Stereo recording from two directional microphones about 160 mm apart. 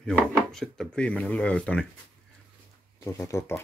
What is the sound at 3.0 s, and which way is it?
Speech, 20° left (ahead or behind).